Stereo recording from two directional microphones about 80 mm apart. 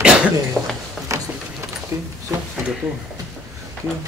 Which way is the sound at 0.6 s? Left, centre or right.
Centre.